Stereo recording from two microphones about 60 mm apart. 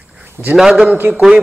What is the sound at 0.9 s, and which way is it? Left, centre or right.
Speech, right.